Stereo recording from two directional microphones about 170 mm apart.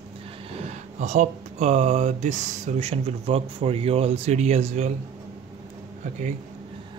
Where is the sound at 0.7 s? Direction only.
45° right (ahead or behind).